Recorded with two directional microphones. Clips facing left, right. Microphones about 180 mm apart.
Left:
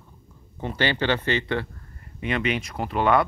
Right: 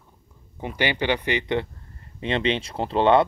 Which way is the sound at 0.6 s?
15° right (ahead or behind).